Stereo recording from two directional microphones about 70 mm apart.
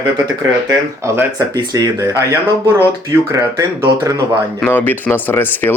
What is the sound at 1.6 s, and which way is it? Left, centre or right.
Speech, right.